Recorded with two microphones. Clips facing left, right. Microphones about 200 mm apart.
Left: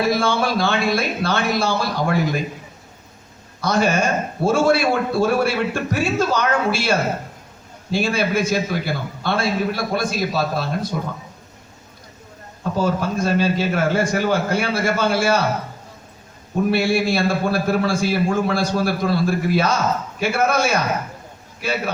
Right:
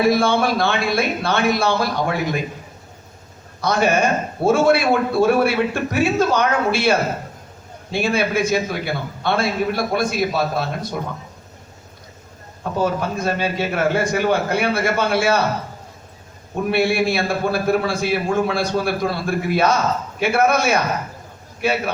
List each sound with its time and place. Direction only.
0.0 s a man's voice: 55° right (ahead or behind)
3.7 s a man's voice: 60° right (ahead or behind)
12.7 s a man's voice: 55° right (ahead or behind)
16.7 s a man's voice: 60° right (ahead or behind)